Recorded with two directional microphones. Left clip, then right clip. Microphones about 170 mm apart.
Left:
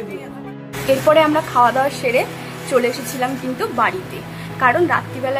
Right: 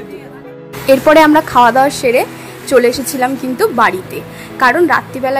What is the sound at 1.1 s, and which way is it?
A woman's voice, 30° right (ahead or behind).